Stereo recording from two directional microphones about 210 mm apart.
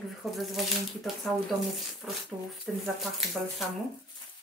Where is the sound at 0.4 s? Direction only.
Centre (ahead or behind).